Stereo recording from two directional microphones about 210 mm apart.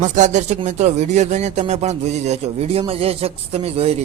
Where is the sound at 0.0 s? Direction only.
35° right (ahead or behind).